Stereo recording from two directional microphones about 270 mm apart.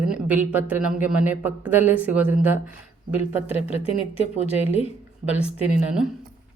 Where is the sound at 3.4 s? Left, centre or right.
Left.